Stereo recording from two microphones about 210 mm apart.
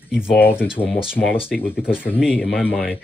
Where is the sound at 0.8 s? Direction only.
Centre (ahead or behind).